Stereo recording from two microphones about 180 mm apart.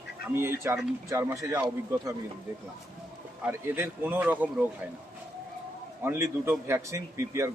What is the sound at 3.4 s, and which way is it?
Speech, 10° right (ahead or behind).